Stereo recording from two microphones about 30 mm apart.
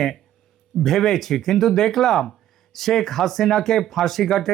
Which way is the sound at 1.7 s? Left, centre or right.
Centre.